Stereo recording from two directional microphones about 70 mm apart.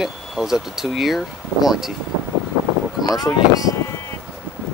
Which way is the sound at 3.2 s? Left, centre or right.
Left.